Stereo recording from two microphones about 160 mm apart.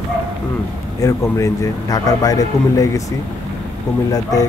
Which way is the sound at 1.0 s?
20° left (ahead or behind).